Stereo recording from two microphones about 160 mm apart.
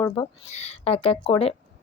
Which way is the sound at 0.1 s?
40° left (ahead or behind).